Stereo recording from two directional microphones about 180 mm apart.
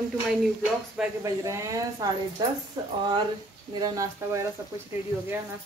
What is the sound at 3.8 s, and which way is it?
Speech, 20° right (ahead or behind).